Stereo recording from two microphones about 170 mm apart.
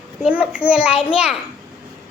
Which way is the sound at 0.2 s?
5° right (ahead or behind).